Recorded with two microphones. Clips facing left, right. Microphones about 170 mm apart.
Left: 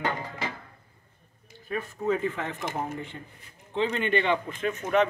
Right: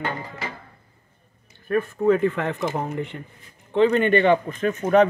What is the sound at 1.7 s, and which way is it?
Speech, 60° right (ahead or behind).